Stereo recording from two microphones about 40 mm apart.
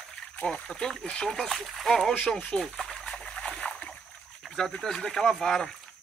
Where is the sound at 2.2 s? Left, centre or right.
Left.